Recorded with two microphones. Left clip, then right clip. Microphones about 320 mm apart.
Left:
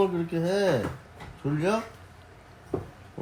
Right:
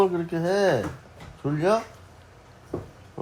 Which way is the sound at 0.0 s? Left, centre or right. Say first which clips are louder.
Right 3 dB; centre.